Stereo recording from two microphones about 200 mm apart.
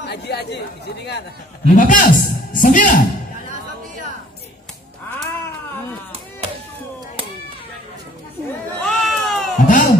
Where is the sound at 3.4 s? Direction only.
40° right (ahead or behind).